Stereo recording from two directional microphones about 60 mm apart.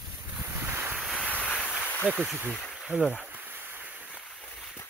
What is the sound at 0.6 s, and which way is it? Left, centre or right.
Wind, right.